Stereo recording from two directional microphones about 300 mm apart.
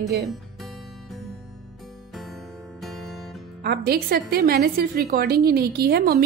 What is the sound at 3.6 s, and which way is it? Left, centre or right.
Speech, right.